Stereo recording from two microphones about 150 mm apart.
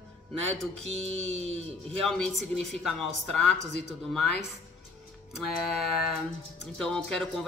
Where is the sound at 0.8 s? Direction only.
45° right (ahead or behind).